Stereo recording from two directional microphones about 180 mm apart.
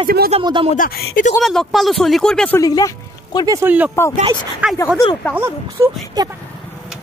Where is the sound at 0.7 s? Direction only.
50° left (ahead or behind).